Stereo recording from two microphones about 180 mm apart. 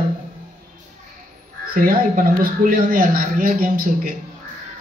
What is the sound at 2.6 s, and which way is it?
A man's voice, 50° right (ahead or behind).